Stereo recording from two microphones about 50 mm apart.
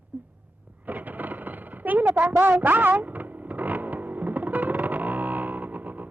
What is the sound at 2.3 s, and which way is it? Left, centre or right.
Vehicle, right.